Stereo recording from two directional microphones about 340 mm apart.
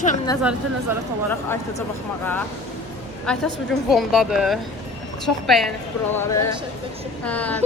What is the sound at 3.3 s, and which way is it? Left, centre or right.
Speech, centre.